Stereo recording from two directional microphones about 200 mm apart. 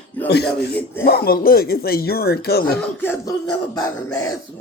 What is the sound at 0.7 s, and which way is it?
Speech, 10° left (ahead or behind).